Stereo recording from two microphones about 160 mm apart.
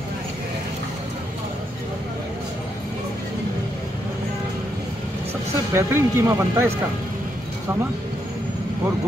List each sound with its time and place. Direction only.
5.7 s speech: 15° right (ahead or behind)